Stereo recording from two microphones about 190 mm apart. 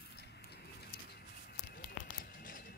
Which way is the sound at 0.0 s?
60° left (ahead or behind).